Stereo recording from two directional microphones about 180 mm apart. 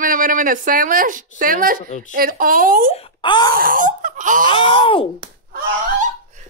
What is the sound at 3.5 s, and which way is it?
Speech, 50° right (ahead or behind).